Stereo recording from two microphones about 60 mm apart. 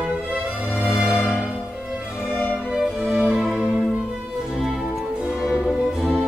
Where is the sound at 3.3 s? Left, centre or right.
Centre.